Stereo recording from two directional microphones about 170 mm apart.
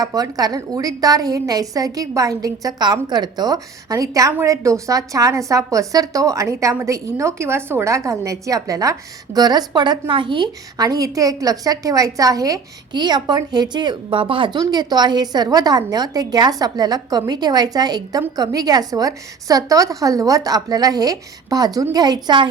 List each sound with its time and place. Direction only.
0.0 s a woman's voice: 20° right (ahead or behind)